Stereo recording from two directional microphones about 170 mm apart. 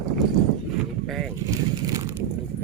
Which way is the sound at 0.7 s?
Centre (ahead or behind).